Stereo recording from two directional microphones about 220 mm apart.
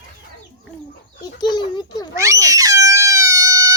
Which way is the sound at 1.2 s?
20° left (ahead or behind).